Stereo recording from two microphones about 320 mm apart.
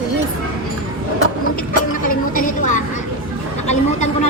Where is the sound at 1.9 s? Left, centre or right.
Left.